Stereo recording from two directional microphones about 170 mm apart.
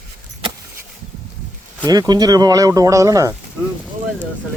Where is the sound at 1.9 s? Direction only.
25° right (ahead or behind).